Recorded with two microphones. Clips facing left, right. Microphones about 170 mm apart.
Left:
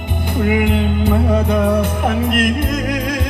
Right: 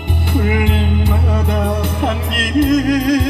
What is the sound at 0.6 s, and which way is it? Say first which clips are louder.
Music: left 2 dB; 55° left (ahead or behind).